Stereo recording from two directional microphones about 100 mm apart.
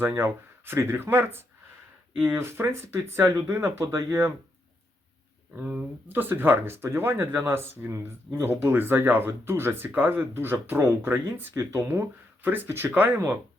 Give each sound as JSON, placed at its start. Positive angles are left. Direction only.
{"t": 0.0, "sound": "speech", "side_deg": -20}
{"t": 5.5, "sound": "speech", "side_deg": -15}